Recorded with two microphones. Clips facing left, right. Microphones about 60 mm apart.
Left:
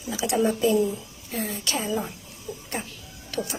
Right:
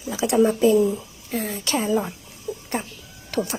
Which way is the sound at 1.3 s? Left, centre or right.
Right.